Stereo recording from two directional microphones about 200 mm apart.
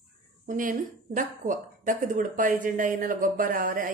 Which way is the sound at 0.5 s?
40° right (ahead or behind).